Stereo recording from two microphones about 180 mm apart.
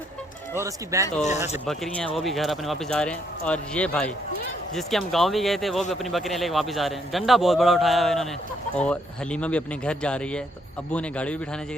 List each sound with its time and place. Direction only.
0.6 s speech: 15° right (ahead or behind)
1.6 s a man's voice: centre (ahead or behind)